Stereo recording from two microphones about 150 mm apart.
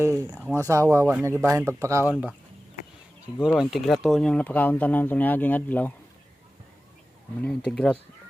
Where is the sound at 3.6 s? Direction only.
Centre (ahead or behind).